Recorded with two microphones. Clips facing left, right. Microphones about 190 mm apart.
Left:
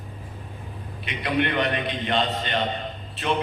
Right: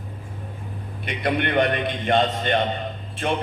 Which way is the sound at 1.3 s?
50° right (ahead or behind).